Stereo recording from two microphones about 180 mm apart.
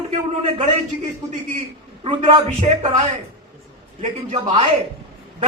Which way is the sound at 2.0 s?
30° right (ahead or behind).